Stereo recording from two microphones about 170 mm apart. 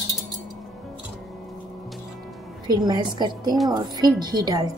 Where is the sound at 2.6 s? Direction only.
25° right (ahead or behind).